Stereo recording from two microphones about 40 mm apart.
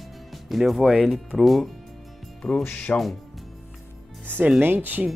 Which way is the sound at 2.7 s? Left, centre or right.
Left.